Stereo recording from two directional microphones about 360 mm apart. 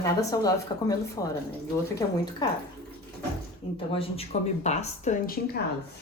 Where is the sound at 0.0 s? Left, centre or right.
Centre.